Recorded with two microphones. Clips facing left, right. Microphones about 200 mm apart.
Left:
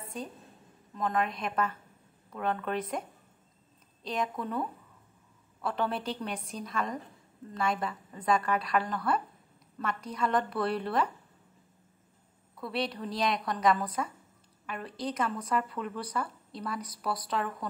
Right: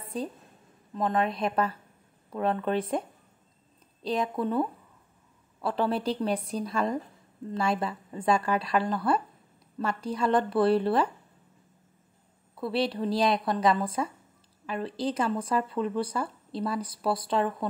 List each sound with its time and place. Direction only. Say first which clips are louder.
0.0 s a sound: right 6 dB; 35° right (ahead or behind)
0.9 s a woman's voice: right 4 dB; 30° right (ahead or behind)
4.0 s a woman's voice: right 5 dB; 35° right (ahead or behind)
12.5 s speech: right 6 dB; 30° right (ahead or behind)